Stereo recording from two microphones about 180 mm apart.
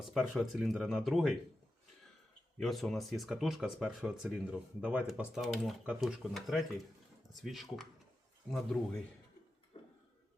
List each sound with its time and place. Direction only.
0.0 s speech: centre (ahead or behind)
2.6 s speech: centre (ahead or behind)
9.7 s a sound: 30° left (ahead or behind)